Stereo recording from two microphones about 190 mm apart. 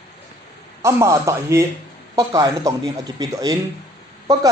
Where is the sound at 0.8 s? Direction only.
15° right (ahead or behind).